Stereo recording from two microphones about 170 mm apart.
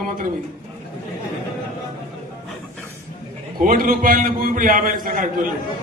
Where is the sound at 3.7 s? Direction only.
55° right (ahead or behind).